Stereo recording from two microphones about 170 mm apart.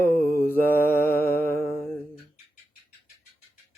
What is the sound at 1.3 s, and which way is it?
Music, 15° left (ahead or behind).